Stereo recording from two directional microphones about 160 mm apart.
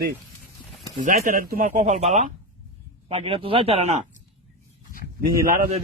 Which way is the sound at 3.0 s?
35° right (ahead or behind).